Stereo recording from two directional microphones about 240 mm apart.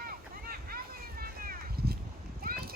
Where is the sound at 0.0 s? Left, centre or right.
Right.